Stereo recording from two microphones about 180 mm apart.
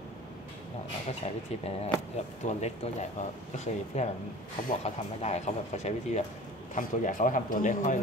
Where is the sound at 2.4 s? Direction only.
40° left (ahead or behind).